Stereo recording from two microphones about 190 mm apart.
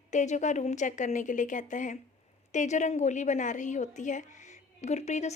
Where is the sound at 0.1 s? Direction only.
40° left (ahead or behind).